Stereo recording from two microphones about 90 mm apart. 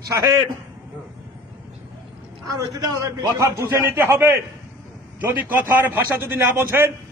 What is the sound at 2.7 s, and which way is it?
A man's voice, 45° right (ahead or behind).